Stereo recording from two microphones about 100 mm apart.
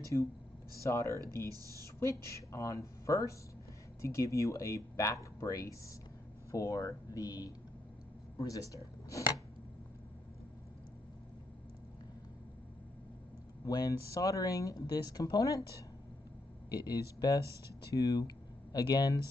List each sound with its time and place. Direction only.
0.0 s speech: 30° left (ahead or behind)
13.7 s speech: 40° left (ahead or behind)
16.7 s speech: 40° left (ahead or behind)